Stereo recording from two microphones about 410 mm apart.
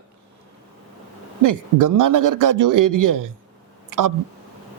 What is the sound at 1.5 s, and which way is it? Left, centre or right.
A man's voice, right.